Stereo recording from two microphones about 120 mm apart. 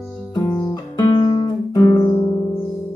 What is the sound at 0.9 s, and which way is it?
Guitar, 40° left (ahead or behind).